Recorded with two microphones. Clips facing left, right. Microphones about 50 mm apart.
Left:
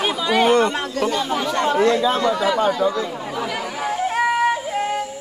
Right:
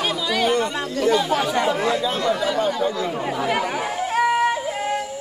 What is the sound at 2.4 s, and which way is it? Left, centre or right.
Speech, left.